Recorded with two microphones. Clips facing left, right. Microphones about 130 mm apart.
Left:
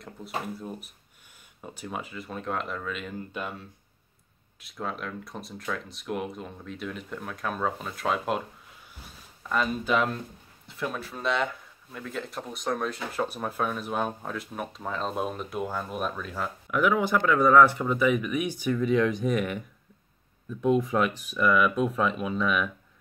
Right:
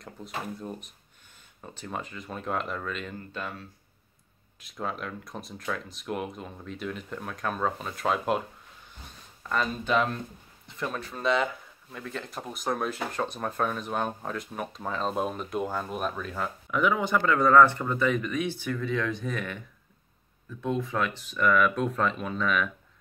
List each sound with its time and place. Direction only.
0.6 s speech: 5° left (ahead or behind)
3.3 s speech: 15° left (ahead or behind)
4.6 s speech: centre (ahead or behind)
9.5 s speech: 5° left (ahead or behind)